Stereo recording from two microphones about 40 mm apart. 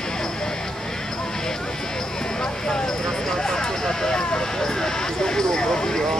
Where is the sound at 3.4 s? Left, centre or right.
Centre.